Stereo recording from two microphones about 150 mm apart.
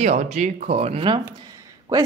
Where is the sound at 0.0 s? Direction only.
50° right (ahead or behind).